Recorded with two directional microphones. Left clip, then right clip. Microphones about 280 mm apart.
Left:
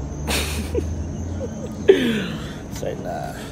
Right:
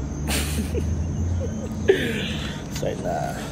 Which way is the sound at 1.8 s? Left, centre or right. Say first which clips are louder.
Left 5 dB; left.